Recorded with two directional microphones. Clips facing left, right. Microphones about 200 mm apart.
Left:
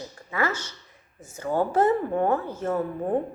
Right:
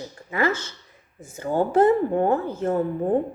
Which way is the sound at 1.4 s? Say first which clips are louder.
Right 3 dB; 30° right (ahead or behind).